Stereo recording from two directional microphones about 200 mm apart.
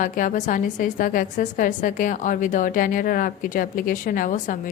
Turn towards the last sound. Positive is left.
turn(degrees=40)  # may be behind; listen again after turning